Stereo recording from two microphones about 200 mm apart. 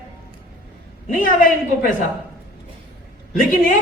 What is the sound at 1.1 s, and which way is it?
Speech, 40° left (ahead or behind).